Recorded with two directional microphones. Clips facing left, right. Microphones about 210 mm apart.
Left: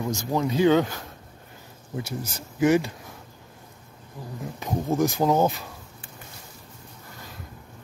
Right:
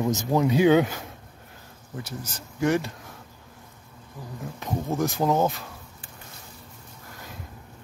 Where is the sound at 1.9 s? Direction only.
10° left (ahead or behind).